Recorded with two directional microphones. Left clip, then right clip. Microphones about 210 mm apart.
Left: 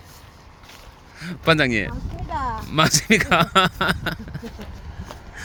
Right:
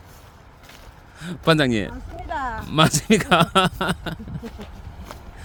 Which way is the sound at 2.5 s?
15° right (ahead or behind).